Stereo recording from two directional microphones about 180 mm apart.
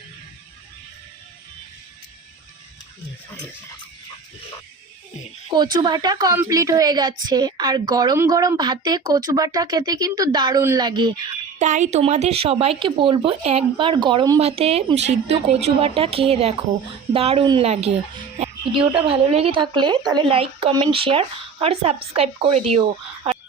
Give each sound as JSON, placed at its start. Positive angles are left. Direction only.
{"t": 5.7, "sound": "a woman's voice", "side_deg": -25}
{"t": 11.6, "sound": "a woman's voice", "side_deg": -40}